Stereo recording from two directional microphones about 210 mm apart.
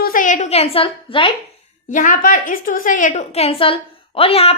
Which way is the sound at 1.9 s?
40° left (ahead or behind).